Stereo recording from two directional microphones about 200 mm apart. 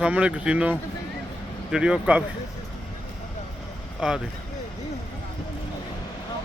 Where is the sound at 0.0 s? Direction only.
5° right (ahead or behind).